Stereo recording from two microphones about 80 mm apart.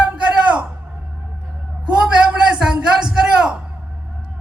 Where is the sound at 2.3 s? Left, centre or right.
Centre.